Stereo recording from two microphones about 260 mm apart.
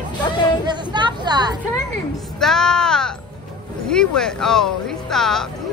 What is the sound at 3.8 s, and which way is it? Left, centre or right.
Speech, centre.